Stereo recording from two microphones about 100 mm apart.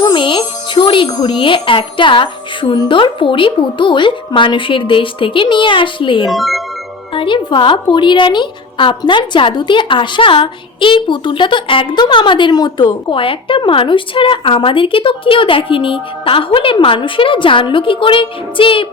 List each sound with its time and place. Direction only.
0.0 s a woman's voice: 55° left (ahead or behind)
6.3 s speech: centre (ahead or behind)
7.1 s a woman's voice: 55° left (ahead or behind)